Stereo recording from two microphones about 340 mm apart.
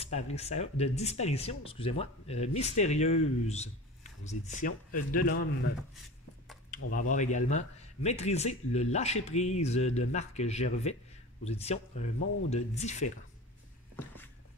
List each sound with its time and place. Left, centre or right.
0.0 s speech: centre
6.9 s speech: left